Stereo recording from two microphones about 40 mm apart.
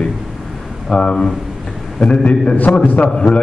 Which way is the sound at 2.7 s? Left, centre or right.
Left.